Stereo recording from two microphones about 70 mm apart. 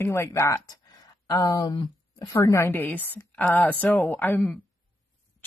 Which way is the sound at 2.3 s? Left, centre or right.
Left.